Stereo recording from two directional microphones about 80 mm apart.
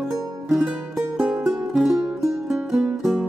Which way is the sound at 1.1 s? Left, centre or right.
Centre.